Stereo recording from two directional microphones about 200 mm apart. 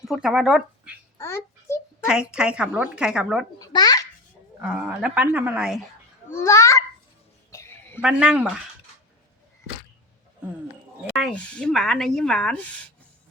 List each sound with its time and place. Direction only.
0.1 s speech: centre (ahead or behind)
1.2 s child singing: 15° left (ahead or behind)
2.0 s speech: 5° right (ahead or behind)
3.6 s a child's voice: 20° left (ahead or behind)
4.6 s speech: 5° right (ahead or behind)
6.3 s babbling: 15° left (ahead or behind)
7.5 s a sound: 15° left (ahead or behind)
8.0 s speech: 5° right (ahead or behind)
11.1 s speech: 5° left (ahead or behind)